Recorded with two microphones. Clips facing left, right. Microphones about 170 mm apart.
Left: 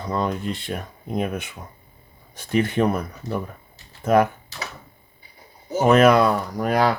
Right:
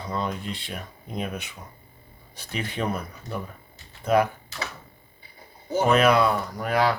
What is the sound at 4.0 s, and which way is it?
Speech, 50° left (ahead or behind).